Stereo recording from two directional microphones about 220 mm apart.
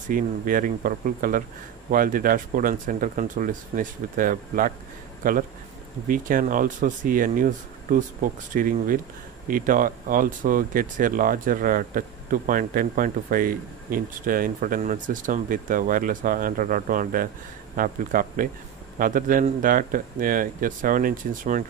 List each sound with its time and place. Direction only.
0.1 s speech: 40° right (ahead or behind)